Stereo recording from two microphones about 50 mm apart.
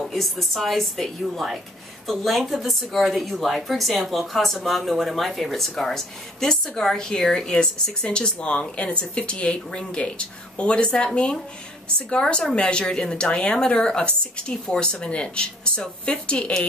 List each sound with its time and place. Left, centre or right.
0.0 s a woman's voice: centre; by 11.1 s left
12.1 s a woman's voice: centre